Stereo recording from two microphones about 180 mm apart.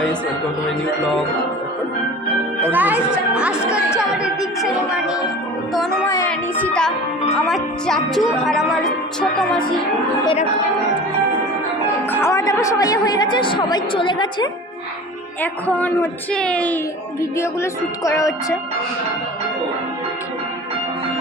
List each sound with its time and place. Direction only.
2.6 s speech: 10° right (ahead or behind)
6.1 s music: 10° left (ahead or behind)
7.4 s speech: centre (ahead or behind)
12.1 s a woman's voice: 15° left (ahead or behind)
15.4 s a man's voice: 10° left (ahead or behind)